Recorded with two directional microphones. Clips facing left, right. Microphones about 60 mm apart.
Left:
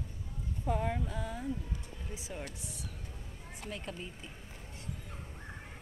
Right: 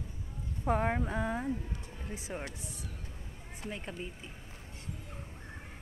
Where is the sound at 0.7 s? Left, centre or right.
Right.